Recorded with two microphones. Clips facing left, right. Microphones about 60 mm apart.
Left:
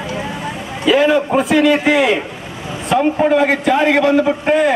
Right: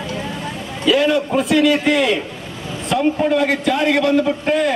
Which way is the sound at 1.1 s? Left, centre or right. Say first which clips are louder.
Left 3 dB; left.